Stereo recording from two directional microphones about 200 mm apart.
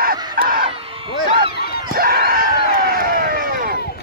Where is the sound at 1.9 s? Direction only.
45° right (ahead or behind).